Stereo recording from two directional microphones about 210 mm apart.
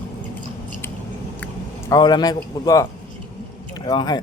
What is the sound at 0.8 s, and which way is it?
Biting, 10° left (ahead or behind).